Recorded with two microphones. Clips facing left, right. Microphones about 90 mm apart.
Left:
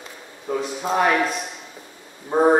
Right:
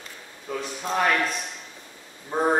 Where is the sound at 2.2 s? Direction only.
20° left (ahead or behind).